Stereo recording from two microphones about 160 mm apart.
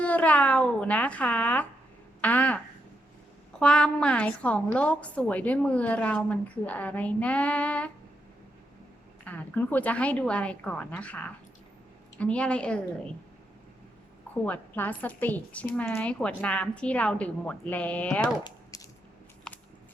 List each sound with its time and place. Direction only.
0.0 s a woman's voice: 10° left (ahead or behind)
3.6 s a woman's voice: 5° left (ahead or behind)
9.2 s a woman's voice: 10° left (ahead or behind)
14.4 s a woman's voice: 10° left (ahead or behind)
18.7 s a sound: 20° left (ahead or behind)
19.5 s biting: 5° left (ahead or behind)